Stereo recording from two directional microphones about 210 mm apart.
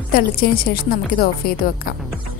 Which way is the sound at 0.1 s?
45° left (ahead or behind).